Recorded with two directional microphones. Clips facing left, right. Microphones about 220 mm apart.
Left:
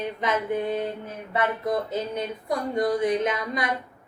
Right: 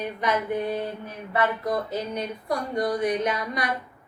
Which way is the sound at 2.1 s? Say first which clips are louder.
Even; 20° left (ahead or behind).